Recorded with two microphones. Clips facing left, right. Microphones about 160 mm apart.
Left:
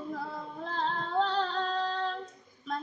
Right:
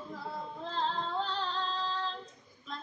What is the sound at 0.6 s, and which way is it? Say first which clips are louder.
Female singing: left 1 dB; 60° left (ahead or behind).